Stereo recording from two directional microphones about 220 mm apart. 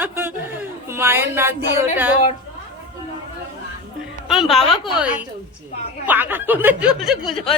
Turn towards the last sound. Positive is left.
turn(degrees=0)  # may be behind; listen again after turning